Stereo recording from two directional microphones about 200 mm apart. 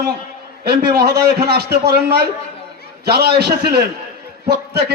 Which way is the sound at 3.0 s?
55° right (ahead or behind).